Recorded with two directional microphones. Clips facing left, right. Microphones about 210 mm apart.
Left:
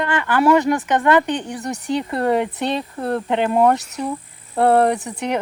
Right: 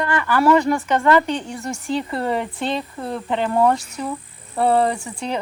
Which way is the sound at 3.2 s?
20° left (ahead or behind).